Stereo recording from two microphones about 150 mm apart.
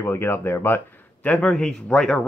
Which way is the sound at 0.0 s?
15° left (ahead or behind).